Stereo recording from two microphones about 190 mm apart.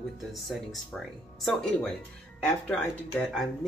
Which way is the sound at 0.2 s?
Centre (ahead or behind).